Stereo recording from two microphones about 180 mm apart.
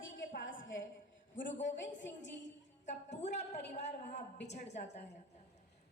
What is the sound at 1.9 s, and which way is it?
Music, 85° left.